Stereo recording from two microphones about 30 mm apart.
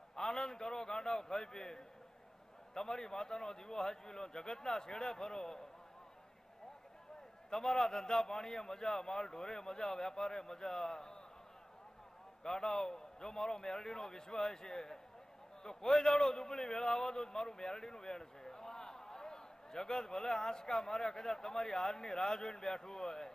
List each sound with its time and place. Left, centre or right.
0.2 s a man's voice: left
7.5 s a man's voice: centre
12.4 s a man's voice: left